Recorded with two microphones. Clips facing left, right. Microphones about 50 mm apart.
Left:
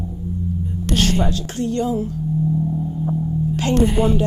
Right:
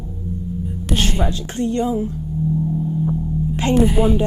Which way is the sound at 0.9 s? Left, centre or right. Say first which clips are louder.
Left 2 dB; centre.